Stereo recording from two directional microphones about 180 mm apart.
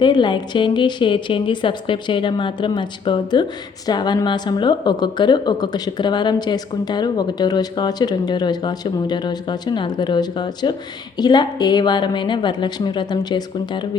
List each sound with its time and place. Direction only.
0.0 s a woman's voice: 25° left (ahead or behind)